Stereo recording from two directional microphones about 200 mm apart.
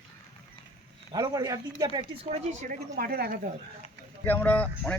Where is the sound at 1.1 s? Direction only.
20° right (ahead or behind).